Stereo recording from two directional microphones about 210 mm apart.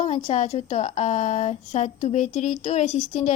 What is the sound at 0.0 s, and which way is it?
Speech, 30° left (ahead or behind).